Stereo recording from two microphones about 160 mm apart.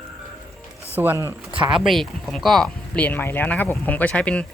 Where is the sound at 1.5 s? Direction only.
30° right (ahead or behind).